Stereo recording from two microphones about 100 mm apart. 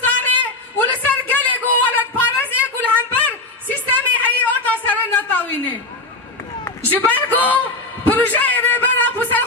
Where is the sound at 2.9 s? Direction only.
15° left (ahead or behind).